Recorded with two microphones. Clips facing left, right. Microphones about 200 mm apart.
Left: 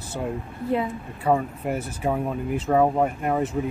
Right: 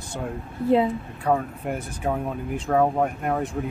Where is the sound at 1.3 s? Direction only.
5° left (ahead or behind).